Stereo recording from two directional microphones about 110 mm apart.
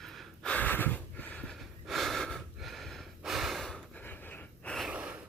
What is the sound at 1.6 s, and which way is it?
Gasp, centre (ahead or behind).